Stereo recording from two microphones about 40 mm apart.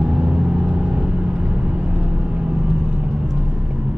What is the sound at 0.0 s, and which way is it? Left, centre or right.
Vehicle, right.